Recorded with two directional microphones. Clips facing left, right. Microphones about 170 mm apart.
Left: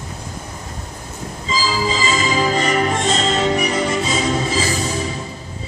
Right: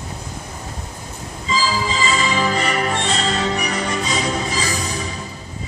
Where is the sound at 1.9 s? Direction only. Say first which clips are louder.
Left 1 dB; 30° left (ahead or behind).